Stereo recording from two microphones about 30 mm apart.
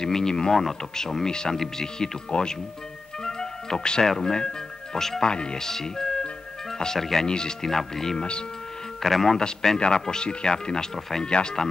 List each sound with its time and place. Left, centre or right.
0.0 s speech: left
3.3 s music: centre
4.0 s speech: centre
5.6 s speech: centre
7.2 s speech: left
7.6 s speech: centre
8.2 s speech: left
9.0 s speech: centre
9.4 s speech: left